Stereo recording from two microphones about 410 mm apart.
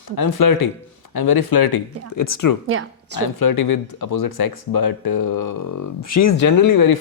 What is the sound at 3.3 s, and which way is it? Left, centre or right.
Speech, left.